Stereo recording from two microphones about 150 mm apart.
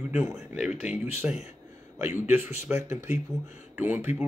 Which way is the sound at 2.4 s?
15° right (ahead or behind).